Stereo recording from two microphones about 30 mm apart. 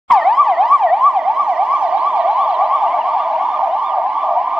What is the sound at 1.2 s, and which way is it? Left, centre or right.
Emergency vehicle, right.